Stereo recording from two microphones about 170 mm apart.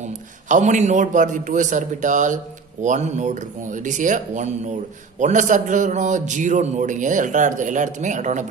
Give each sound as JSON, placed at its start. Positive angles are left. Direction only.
{"t": 0.0, "sound": "a man's voice", "side_deg": -45}